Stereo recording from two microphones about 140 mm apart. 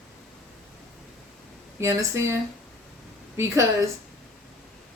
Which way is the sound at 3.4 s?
20° right (ahead or behind).